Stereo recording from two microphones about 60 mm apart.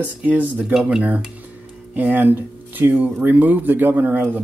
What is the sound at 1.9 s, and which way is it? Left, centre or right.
Speech, right.